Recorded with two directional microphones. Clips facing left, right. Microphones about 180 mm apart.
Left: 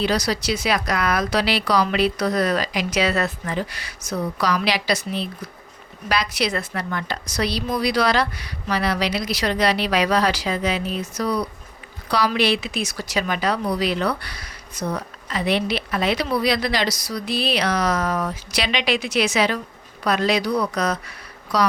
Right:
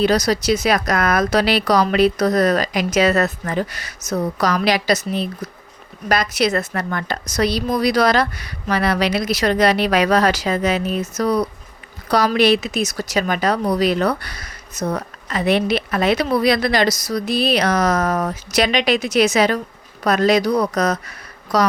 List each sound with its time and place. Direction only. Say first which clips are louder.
0.0 s a woman's voice: right 5 dB; 45° right (ahead or behind)